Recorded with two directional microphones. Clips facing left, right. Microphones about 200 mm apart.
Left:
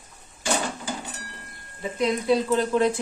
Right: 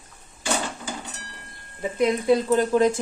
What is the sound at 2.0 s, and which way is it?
Speech, 50° right (ahead or behind).